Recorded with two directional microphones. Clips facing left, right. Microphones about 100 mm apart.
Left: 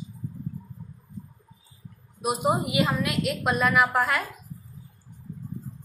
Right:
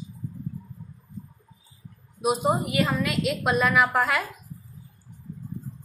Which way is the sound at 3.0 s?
Centre (ahead or behind).